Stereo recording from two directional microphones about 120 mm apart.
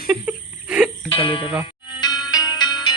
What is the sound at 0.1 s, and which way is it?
Whimper, 10° right (ahead or behind).